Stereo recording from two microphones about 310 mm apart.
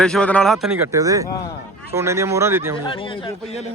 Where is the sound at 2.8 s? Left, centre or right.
Centre.